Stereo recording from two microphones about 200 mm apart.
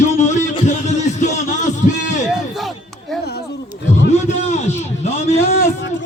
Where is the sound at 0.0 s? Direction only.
35° left (ahead or behind).